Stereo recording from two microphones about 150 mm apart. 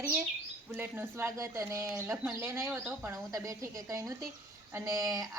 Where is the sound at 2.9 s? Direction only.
20° right (ahead or behind).